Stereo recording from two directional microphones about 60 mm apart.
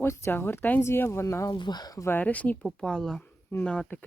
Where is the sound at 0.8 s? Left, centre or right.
Left.